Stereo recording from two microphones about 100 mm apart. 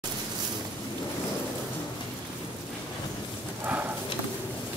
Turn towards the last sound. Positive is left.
turn(degrees=-20)  # may be behind; listen again after turning